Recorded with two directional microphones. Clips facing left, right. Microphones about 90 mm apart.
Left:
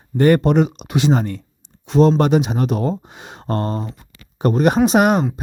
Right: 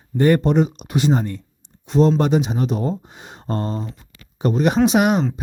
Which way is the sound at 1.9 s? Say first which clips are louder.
Left 2 dB; 70° left (ahead or behind).